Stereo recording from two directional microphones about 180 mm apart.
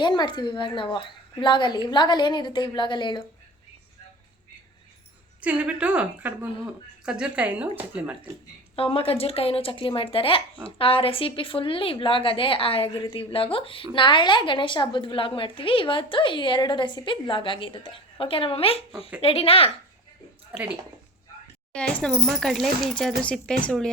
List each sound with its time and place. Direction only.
0.0 s speech: 25° left (ahead or behind)
5.4 s a woman's voice: 5° right (ahead or behind)
8.7 s speech: 30° left (ahead or behind)
18.9 s speech: centre (ahead or behind)
19.2 s speech: 30° left (ahead or behind)
20.5 s a woman's voice: 5° right (ahead or behind)
21.7 s speech: 5° left (ahead or behind)